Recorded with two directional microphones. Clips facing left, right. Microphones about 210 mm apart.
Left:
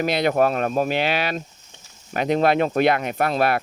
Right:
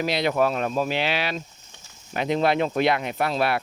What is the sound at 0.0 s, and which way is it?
Speech, 50° left (ahead or behind).